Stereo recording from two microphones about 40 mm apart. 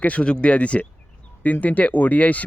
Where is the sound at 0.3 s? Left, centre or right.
Left.